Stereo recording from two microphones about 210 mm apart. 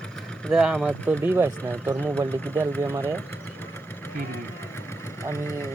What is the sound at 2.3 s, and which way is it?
Speech, 10° left (ahead or behind).